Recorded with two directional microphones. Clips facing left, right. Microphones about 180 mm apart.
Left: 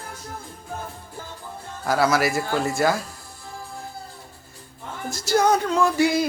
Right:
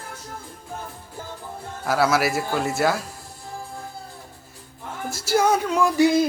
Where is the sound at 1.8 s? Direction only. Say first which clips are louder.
Even; centre (ahead or behind).